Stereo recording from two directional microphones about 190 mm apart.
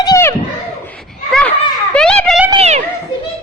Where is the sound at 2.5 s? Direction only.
35° right (ahead or behind).